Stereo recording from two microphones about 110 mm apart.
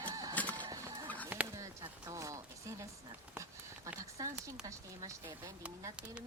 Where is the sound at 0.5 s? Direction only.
45° right (ahead or behind).